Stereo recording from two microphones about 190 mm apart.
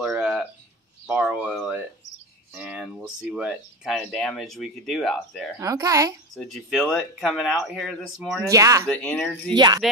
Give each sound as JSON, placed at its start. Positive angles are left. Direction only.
{"t": 0.0, "sound": "a sound", "side_deg": -5}
{"t": 3.2, "sound": "speech", "side_deg": -5}
{"t": 5.6, "sound": "a child's voice", "side_deg": -20}
{"t": 6.3, "sound": "speech", "side_deg": 0}
{"t": 8.5, "sound": "a child's voice", "side_deg": -15}
{"t": 8.8, "sound": "speech", "side_deg": 5}